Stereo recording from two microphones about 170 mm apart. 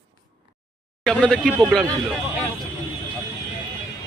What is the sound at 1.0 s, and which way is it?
Speech, 5° left (ahead or behind).